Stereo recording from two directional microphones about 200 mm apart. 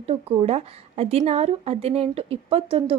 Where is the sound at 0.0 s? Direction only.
30° right (ahead or behind).